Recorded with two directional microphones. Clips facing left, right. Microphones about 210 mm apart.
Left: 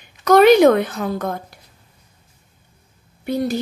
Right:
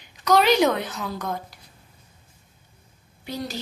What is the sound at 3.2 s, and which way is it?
Speech, 55° left (ahead or behind).